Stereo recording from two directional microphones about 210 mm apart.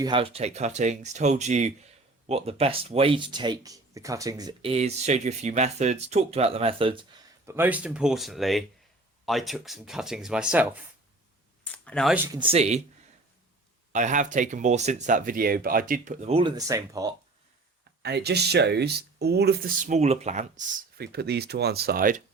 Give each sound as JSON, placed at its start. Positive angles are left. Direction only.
{"t": 0.0, "sound": "speech", "side_deg": -25}
{"t": 7.4, "sound": "speech", "side_deg": -10}
{"t": 11.6, "sound": "a sound", "side_deg": 5}
{"t": 12.1, "sound": "speech", "side_deg": -10}
{"t": 12.4, "sound": "speech", "side_deg": -30}
{"t": 13.9, "sound": "speech", "side_deg": -35}
{"t": 18.0, "sound": "speech", "side_deg": -50}
{"t": 21.0, "sound": "speech", "side_deg": -50}